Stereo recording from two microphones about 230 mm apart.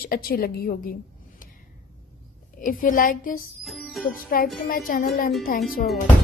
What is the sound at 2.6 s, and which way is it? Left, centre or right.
Speech, left.